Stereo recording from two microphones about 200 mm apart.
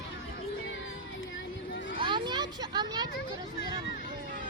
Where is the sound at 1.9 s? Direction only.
25° right (ahead or behind).